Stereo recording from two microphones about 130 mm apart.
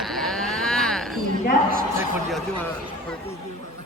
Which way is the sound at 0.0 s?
Centre (ahead or behind).